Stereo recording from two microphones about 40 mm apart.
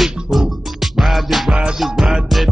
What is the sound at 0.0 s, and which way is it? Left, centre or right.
Music, centre.